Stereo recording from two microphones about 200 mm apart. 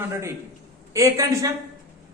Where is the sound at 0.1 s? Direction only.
15° right (ahead or behind).